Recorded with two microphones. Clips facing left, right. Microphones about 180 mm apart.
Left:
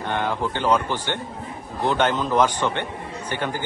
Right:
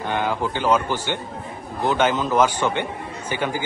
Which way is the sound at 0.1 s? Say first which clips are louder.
Right 1 dB; 5° right (ahead or behind).